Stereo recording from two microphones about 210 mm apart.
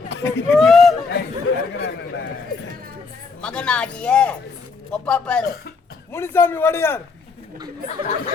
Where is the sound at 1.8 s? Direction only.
55° left (ahead or behind).